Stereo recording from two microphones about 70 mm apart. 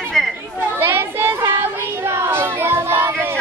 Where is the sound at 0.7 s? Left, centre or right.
Right.